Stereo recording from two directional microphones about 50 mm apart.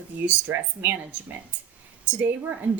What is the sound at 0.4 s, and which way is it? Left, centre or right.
Speech, right.